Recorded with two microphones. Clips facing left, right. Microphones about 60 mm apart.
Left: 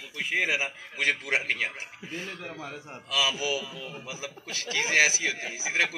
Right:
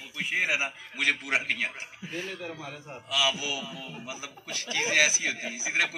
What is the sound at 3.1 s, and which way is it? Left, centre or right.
Speech, left.